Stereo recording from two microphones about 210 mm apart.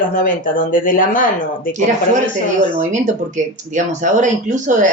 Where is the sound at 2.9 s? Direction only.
35° right (ahead or behind).